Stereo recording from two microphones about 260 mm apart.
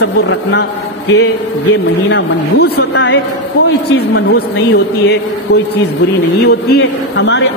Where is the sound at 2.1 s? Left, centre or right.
Left.